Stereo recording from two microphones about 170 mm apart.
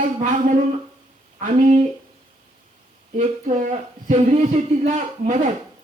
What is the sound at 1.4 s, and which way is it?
Speech, 45° right (ahead or behind).